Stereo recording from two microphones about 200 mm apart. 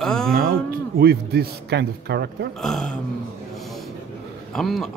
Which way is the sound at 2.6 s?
Centre (ahead or behind).